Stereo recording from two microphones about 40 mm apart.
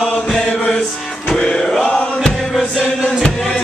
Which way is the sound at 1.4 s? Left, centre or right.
Left.